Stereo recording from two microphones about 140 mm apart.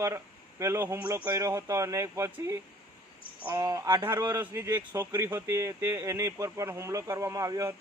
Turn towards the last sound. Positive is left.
turn(degrees=-20)  # may be behind; listen again after turning